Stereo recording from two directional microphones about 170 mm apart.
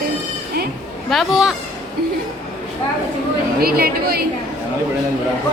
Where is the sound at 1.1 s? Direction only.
Centre (ahead or behind).